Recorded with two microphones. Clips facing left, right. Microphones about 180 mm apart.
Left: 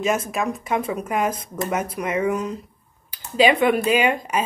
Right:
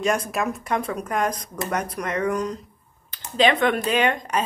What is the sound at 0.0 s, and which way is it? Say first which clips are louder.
Speech: left 1 dB; centre (ahead or behind).